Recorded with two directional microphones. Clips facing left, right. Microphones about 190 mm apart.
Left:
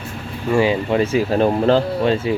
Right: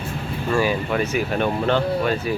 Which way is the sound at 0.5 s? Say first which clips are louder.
Left 5 dB; 25° left (ahead or behind).